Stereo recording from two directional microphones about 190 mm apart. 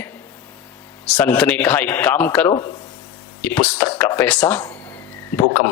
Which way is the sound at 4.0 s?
15° left (ahead or behind).